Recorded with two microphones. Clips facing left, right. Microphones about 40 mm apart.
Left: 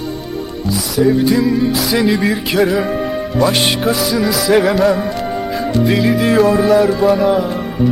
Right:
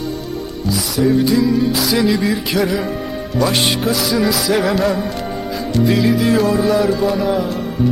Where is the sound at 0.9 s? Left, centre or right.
Centre.